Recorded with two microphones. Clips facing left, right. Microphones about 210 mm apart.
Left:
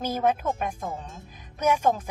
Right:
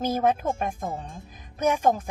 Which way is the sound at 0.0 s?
45° right (ahead or behind).